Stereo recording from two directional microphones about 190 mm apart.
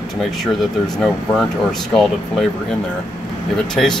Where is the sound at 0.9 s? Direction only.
Centre (ahead or behind).